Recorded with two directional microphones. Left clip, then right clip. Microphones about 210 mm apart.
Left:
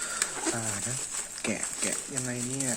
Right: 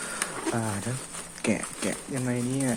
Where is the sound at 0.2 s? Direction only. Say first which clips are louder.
Right 3 dB; 5° right (ahead or behind).